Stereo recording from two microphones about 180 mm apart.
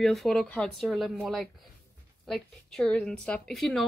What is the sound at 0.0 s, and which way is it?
Speech, centre (ahead or behind).